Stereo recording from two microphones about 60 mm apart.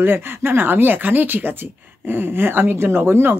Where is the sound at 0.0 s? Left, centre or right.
Right.